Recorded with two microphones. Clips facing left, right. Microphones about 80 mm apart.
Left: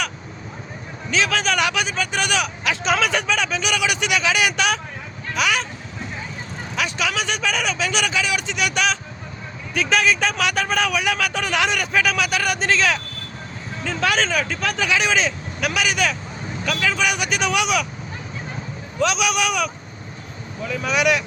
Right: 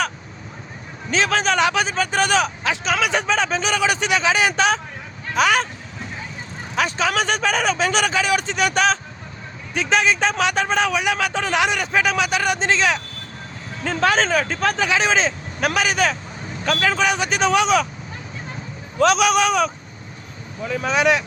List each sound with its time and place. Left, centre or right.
1.1 s speech: right
5.3 s speech: right
6.7 s speech: right
9.7 s speech: right
13.8 s speech: right
14.1 s speech: right
18.9 s speech: right